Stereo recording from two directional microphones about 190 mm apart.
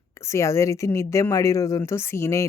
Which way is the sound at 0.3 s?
15° left (ahead or behind).